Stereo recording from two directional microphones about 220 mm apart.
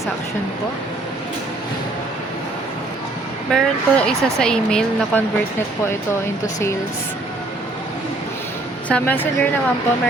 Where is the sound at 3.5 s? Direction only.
5° left (ahead or behind).